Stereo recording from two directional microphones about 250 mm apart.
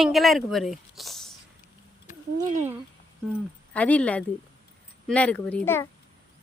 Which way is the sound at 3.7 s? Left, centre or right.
Centre.